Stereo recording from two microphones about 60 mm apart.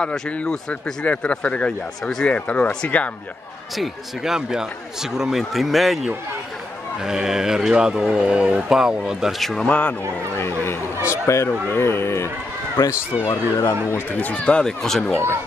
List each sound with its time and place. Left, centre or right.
0.0 s speech: centre
3.7 s a man's voice: centre
9.4 s a man's voice: centre
9.7 s speech: left
10.3 s speech: left
11.0 s a sound: left
11.6 s speech: left
13.3 s speech: left
14.2 s speech: left